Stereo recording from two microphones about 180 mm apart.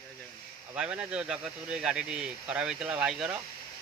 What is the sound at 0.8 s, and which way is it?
Speech, 5° right (ahead or behind).